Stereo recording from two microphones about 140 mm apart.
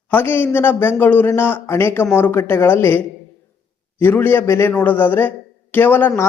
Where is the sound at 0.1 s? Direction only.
15° left (ahead or behind).